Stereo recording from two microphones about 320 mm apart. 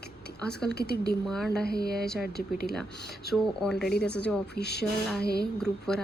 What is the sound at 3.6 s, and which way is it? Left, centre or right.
Speech, centre.